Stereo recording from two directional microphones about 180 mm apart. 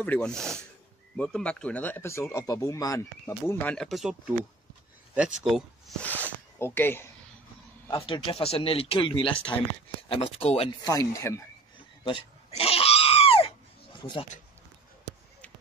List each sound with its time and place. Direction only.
0.0 s speech: 5° left (ahead or behind)
7.9 s speech: 30° left (ahead or behind)
10.8 s speech: 20° left (ahead or behind)
12.0 s a sound: 30° left (ahead or behind)